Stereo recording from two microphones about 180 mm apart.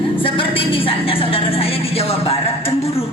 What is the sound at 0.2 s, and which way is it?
Music, 30° left (ahead or behind).